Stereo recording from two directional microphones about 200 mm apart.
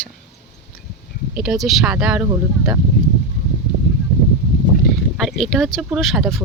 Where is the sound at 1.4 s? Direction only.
Centre (ahead or behind).